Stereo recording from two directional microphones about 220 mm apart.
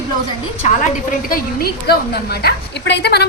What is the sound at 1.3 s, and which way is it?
A woman's voice, 40° left (ahead or behind).